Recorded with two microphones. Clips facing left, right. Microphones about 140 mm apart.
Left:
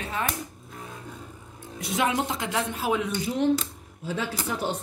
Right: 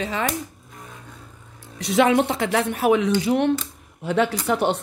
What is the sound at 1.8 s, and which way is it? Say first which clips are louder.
Speech: right 8 dB; 75° right (ahead or behind).